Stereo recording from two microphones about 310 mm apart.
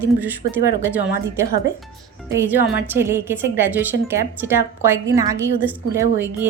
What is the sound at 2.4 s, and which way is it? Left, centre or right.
A woman's voice, centre.